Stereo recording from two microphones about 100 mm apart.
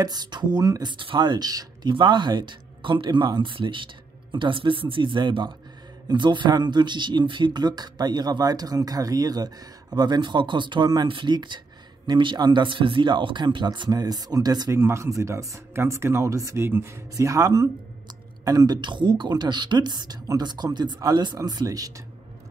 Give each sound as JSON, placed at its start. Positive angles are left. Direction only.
{"t": 0.0, "sound": "speech", "side_deg": -45}
{"t": 0.9, "sound": "speech", "side_deg": -55}
{"t": 14.7, "sound": "speech", "side_deg": -30}